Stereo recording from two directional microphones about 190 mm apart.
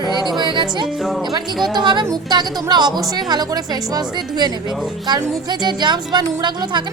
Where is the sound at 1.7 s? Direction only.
25° right (ahead or behind).